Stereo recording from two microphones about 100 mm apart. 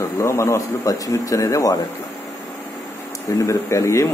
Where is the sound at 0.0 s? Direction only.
30° left (ahead or behind).